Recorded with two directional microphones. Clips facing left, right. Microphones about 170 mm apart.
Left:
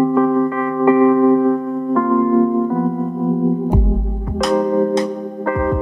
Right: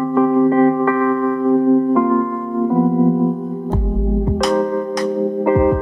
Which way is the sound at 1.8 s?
Centre (ahead or behind).